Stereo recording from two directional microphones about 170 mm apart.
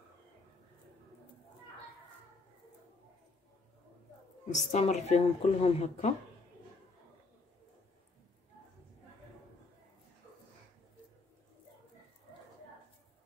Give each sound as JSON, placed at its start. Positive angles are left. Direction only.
{"t": 4.6, "sound": "speech", "side_deg": 45}